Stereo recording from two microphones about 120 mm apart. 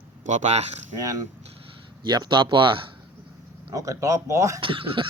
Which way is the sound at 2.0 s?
40° right (ahead or behind).